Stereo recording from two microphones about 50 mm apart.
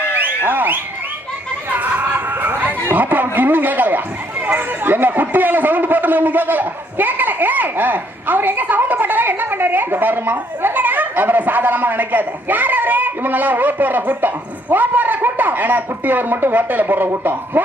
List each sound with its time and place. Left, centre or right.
0.2 s a sound: right
1.7 s chatter: right
2.9 s speech: right